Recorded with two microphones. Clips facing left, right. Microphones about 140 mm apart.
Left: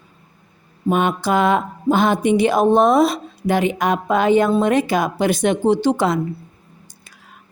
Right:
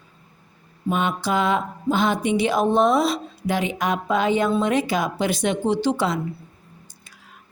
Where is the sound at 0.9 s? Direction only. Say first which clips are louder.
Left 5 dB; 50° left (ahead or behind).